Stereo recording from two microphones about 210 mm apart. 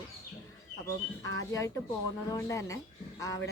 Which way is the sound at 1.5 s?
15° left (ahead or behind).